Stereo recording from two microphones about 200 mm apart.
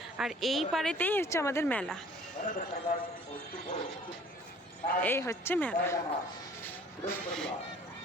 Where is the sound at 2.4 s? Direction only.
35° left (ahead or behind).